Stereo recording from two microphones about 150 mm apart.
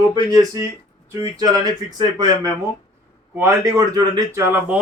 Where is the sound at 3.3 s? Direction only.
20° right (ahead or behind).